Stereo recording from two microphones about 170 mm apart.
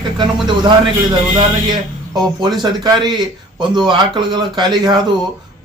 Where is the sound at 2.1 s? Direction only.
20° right (ahead or behind).